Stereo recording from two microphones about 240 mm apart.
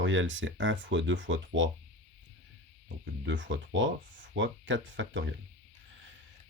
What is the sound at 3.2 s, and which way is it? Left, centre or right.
Speech, right.